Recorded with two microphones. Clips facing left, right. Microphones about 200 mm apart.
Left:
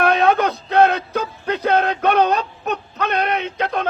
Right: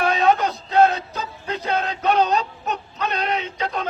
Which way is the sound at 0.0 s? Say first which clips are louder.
Left 3 dB; 60° left (ahead or behind).